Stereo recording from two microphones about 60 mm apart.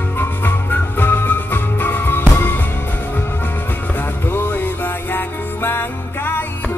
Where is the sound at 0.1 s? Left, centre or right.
Left.